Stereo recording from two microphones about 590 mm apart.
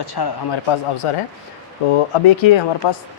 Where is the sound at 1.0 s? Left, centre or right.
Left.